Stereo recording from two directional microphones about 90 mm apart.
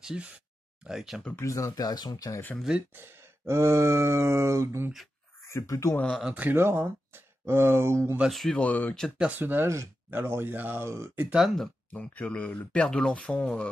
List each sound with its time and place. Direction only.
0.0 s speech: 10° right (ahead or behind)
1.3 s speech: 35° left (ahead or behind)
2.9 s groan: 25° right (ahead or behind)
5.5 s speech: 35° left (ahead or behind)
6.3 s speech: 15° right (ahead or behind)
8.3 s speech: centre (ahead or behind)
8.5 s speech: 20° left (ahead or behind)
9.4 s speech: 25° right (ahead or behind)
11.2 s speech: 5° right (ahead or behind)
11.9 s speech: 15° left (ahead or behind)